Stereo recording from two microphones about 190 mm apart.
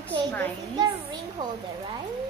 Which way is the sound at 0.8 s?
20° right (ahead or behind).